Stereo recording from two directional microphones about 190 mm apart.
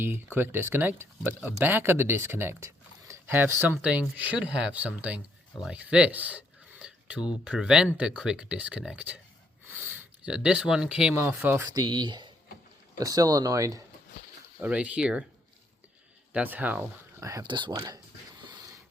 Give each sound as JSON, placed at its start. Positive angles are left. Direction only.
{"t": 0.0, "sound": "speech", "side_deg": -10}
{"t": 14.6, "sound": "speech", "side_deg": -5}
{"t": 16.3, "sound": "speech", "side_deg": -10}